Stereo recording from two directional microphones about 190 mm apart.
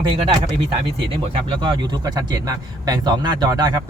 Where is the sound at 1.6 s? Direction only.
25° right (ahead or behind).